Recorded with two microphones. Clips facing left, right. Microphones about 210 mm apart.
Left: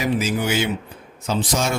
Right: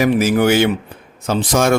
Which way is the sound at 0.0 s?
60° right (ahead or behind).